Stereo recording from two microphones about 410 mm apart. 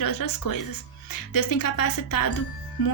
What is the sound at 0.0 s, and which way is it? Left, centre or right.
Music, left.